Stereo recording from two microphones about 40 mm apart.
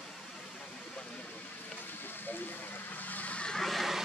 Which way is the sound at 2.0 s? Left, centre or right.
Left.